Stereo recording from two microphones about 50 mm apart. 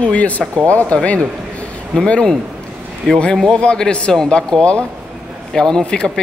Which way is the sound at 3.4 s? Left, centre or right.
Centre.